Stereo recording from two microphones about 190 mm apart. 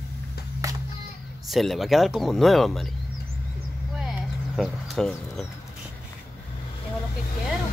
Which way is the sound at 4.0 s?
Centre (ahead or behind).